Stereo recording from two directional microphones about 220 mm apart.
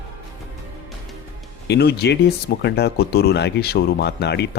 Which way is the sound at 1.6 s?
50° left (ahead or behind).